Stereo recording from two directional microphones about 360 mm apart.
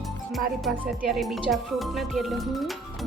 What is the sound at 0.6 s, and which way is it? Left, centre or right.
A woman's voice, centre.